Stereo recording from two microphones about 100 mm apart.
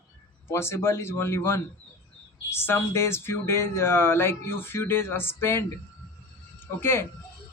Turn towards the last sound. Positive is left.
turn(degrees=25)  # may be behind; listen again after turning